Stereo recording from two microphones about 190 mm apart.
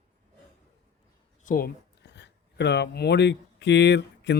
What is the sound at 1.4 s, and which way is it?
A man's voice, 50° left (ahead or behind).